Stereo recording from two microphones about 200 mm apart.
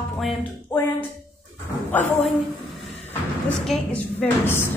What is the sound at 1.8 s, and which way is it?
Speech, 10° left (ahead or behind).